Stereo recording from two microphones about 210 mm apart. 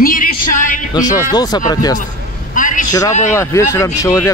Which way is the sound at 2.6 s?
40° left (ahead or behind).